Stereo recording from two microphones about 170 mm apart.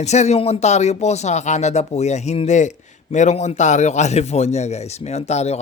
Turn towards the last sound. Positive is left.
turn(degrees=40)  # may be behind; listen again after turning